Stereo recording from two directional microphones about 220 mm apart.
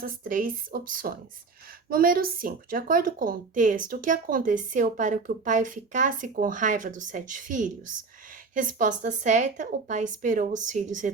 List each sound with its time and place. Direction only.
0.0 s a woman's voice: 40° right (ahead or behind)